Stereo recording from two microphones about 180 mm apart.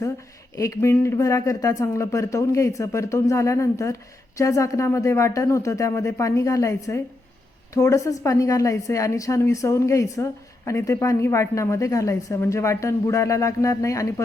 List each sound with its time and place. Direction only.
0.5 s a woman's voice: 15° left (ahead or behind)